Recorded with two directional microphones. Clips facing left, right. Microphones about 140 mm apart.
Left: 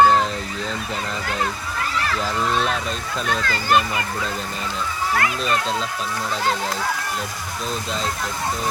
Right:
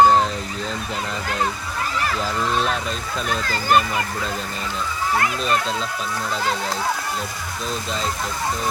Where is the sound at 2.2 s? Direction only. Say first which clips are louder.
Left 1 dB; centre (ahead or behind).